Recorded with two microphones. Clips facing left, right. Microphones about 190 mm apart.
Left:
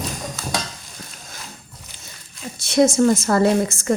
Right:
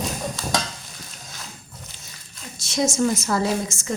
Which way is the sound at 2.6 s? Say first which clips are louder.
Left 6 dB; 60° left (ahead or behind).